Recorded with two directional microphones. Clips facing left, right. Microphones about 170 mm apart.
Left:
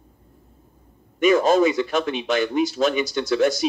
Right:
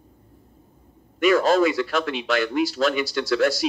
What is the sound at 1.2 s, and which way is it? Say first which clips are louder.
Speech: left 1 dB; 20° left (ahead or behind).